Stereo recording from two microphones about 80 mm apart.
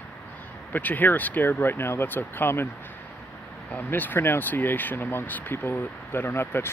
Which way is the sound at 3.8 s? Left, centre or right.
Left.